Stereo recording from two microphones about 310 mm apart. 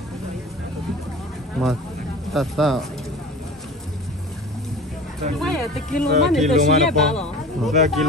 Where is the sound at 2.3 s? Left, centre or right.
Centre.